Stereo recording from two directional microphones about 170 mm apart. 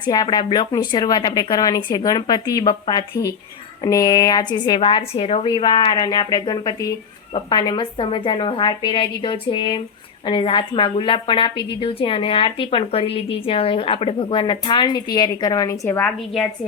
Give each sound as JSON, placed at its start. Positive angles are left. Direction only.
{"t": 0.0, "sound": "a woman's voice", "side_deg": 25}